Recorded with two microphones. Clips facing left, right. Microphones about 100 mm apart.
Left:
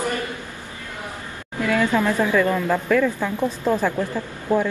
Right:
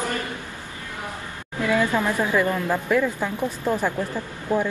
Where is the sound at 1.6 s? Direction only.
15° right (ahead or behind).